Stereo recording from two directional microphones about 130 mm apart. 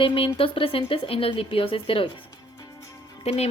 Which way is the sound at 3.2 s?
55° left (ahead or behind).